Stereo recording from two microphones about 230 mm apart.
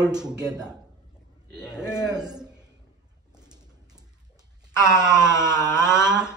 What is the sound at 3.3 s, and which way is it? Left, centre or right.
Pigeon, centre.